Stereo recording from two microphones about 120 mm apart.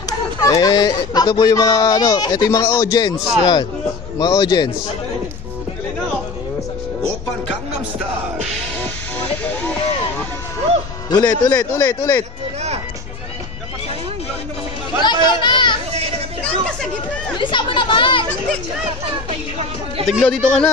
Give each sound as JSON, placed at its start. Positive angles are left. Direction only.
{"t": 0.4, "sound": "speech", "side_deg": 30}
{"t": 2.7, "sound": "speech", "side_deg": 35}
{"t": 3.2, "sound": "speech", "side_deg": -5}
{"t": 4.2, "sound": "speech", "side_deg": 35}
{"t": 11.1, "sound": "speech", "side_deg": 35}
{"t": 11.5, "sound": "speech", "side_deg": 20}
{"t": 15.0, "sound": "children playing", "side_deg": 40}
{"t": 17.4, "sound": "chatter", "side_deg": 45}
{"t": 20.1, "sound": "speech", "side_deg": 0}